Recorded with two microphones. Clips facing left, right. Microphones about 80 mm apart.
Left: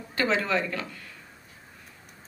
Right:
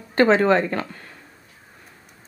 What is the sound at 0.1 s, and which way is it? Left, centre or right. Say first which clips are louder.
Speech: right 10 dB; right.